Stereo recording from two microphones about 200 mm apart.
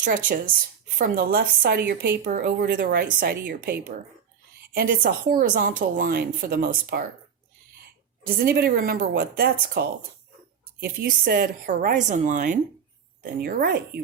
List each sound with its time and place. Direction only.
0.9 s a woman's voice: 45° right (ahead or behind)
8.3 s a woman's voice: 50° right (ahead or behind)
13.4 s a woman's voice: 50° right (ahead or behind)